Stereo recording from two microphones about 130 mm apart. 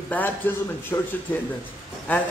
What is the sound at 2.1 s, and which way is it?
Speech, 15° left (ahead or behind).